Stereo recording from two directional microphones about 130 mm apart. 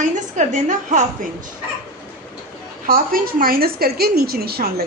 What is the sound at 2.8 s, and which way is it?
Speech, 90° right.